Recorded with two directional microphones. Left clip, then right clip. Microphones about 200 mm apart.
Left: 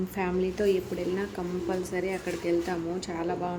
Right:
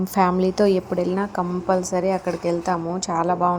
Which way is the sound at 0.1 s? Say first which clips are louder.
Right 13 dB; 25° right (ahead or behind).